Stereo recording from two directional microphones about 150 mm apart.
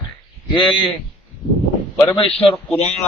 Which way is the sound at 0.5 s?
35° left (ahead or behind).